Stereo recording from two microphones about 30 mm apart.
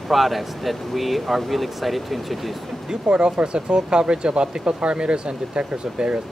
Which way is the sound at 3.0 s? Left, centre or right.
Right.